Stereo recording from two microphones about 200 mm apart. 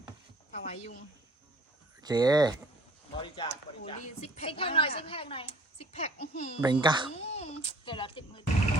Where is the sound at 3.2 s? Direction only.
25° left (ahead or behind).